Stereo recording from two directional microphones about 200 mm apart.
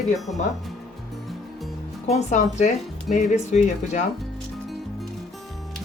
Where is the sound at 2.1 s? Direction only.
35° left (ahead or behind).